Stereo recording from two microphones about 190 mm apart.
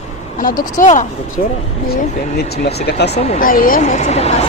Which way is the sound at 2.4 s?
55° left (ahead or behind).